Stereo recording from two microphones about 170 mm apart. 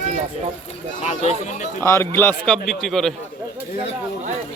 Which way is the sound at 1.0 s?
40° left (ahead or behind).